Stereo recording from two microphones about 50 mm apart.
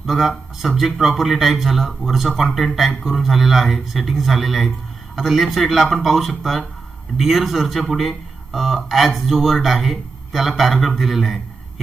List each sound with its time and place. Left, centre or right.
0.0 s a man's voice: centre